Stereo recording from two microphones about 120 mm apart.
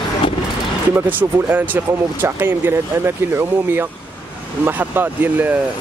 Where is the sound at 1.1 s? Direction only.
15° right (ahead or behind).